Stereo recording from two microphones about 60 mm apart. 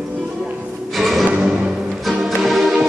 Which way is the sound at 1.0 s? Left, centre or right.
Centre.